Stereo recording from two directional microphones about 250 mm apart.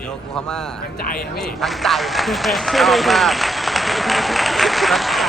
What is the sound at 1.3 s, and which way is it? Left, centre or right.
A man's voice, centre.